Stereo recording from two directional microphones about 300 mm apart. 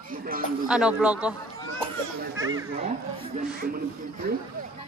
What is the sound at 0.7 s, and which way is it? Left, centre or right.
Speech, centre.